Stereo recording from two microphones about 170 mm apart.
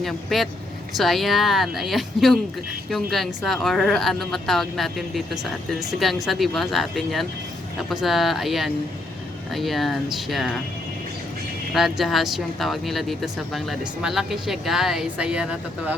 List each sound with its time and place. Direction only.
0.0 s speech: centre (ahead or behind)
11.7 s speech: centre (ahead or behind)